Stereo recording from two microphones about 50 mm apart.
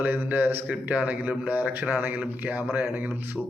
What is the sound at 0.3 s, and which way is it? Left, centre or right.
Speech, right.